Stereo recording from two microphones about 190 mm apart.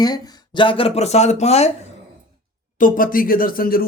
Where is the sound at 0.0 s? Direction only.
25° left (ahead or behind).